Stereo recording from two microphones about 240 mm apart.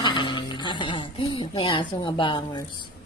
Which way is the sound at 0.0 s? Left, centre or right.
Centre.